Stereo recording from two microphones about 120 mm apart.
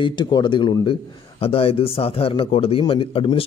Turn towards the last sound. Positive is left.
turn(degrees=50)  # may be behind; listen again after turning